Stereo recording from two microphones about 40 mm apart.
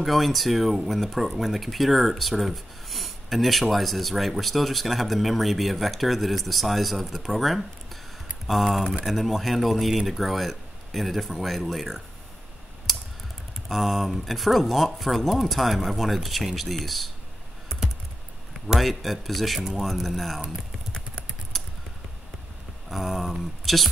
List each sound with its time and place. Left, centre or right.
0.0 s speech: centre
13.7 s speech: centre
18.8 s speech: centre
20.4 s typing: left
21.5 s a sound: centre
22.8 s speech: centre